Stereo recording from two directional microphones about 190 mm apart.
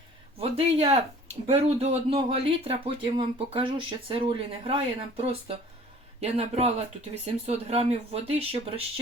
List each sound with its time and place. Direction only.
0.3 s speech: 30° right (ahead or behind)